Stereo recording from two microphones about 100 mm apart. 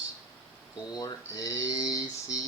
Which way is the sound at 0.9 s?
40° left (ahead or behind).